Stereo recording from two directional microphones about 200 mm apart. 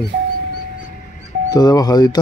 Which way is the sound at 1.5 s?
20° left (ahead or behind).